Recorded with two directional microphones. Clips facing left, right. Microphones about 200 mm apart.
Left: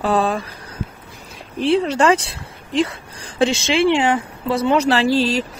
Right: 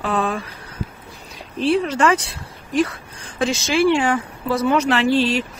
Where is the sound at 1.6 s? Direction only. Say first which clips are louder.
Left 1 dB; 30° left (ahead or behind).